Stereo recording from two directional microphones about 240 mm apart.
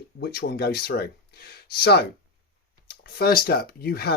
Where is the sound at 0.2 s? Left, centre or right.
Left.